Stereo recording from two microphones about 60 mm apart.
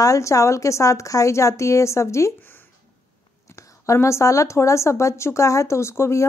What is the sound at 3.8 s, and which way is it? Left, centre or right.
A woman's voice, left.